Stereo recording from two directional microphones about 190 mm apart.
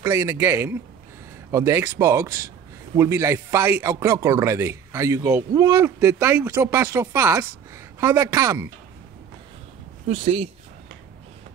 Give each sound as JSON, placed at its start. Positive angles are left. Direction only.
{"t": 0.0, "sound": "a man's voice", "side_deg": -15}
{"t": 10.0, "sound": "speech", "side_deg": -35}